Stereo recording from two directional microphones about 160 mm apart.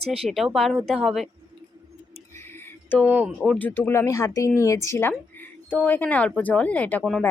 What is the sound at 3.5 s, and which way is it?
Speech, 10° left (ahead or behind).